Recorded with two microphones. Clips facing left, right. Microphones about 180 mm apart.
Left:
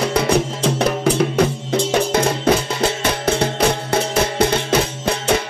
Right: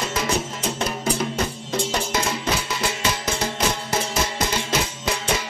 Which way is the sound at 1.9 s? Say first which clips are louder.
Left 8 dB; 55° left (ahead or behind).